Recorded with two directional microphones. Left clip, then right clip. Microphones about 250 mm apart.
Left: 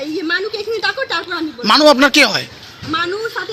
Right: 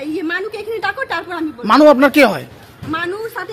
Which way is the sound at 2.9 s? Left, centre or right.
Centre.